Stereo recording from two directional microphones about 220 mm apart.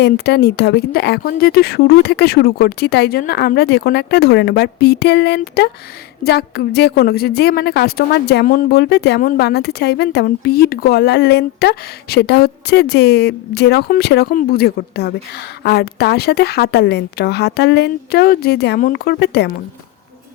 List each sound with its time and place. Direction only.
0.0 s a woman's voice: 45° left (ahead or behind)